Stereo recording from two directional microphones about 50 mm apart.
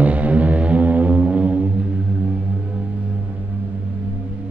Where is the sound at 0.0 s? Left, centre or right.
Right.